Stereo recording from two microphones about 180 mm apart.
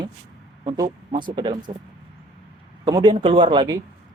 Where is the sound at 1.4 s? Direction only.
25° right (ahead or behind).